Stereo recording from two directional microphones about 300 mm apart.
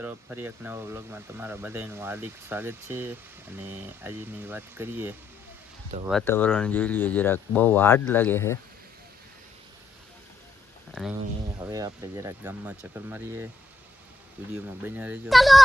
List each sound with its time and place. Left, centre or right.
0.0 s speech: centre
6.1 s speech: centre
11.7 s speech: centre